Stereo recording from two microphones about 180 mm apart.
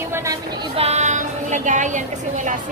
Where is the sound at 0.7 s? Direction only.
35° right (ahead or behind).